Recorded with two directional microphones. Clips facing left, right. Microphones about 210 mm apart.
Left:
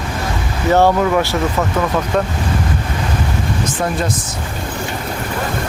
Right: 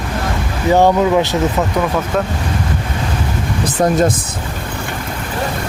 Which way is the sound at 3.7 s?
45° right (ahead or behind).